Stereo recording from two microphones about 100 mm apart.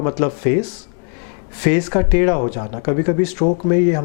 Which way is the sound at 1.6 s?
15° left (ahead or behind).